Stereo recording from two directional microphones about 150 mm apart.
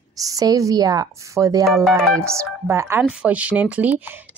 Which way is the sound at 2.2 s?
20° right (ahead or behind).